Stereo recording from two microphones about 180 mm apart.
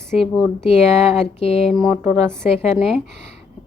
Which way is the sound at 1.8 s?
10° right (ahead or behind).